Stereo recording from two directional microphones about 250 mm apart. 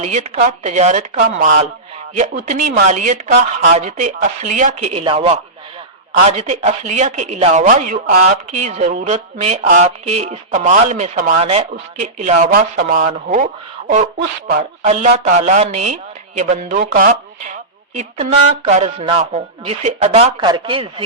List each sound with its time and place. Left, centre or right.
0.0 s speech: right